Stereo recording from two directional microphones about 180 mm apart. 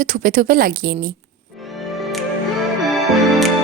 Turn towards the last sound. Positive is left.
turn(degrees=0)  # may be behind; listen again after turning